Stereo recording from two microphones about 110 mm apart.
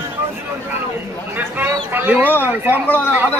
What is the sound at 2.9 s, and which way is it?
Speech, 15° left (ahead or behind).